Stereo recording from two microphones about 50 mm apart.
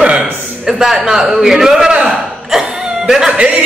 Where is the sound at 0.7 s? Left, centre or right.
Centre.